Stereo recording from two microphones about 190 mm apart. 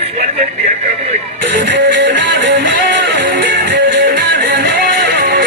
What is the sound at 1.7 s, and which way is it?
Music, 70° right (ahead or behind).